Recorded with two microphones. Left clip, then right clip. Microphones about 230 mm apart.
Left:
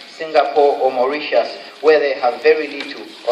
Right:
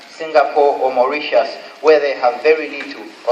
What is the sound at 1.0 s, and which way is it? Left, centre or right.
A man's voice, left.